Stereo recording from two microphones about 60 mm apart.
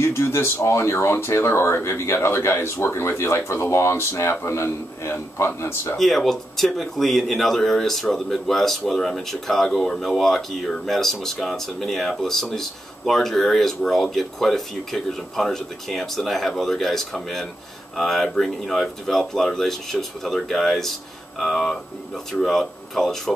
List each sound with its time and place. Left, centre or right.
0.0 s speech: left
5.9 s speech: centre